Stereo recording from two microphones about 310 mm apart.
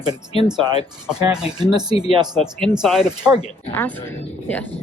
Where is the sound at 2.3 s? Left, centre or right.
Centre.